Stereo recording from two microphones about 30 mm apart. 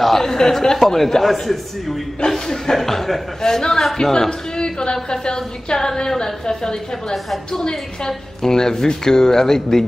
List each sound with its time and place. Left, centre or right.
0.0 s a man's voice: centre
0.7 s speech: centre
2.1 s a man's voice: centre
8.4 s a man's voice: centre